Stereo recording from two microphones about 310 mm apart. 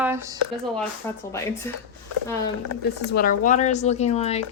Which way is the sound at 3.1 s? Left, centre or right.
Left.